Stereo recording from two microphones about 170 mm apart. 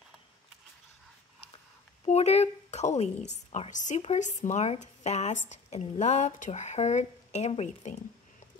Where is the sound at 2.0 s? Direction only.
40° left (ahead or behind).